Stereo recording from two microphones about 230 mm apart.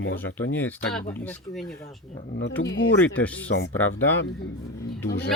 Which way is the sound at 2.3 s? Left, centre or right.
Left.